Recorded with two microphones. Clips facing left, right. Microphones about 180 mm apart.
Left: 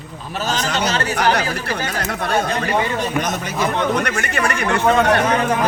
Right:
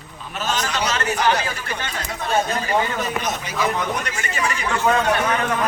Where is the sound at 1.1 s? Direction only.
70° left (ahead or behind).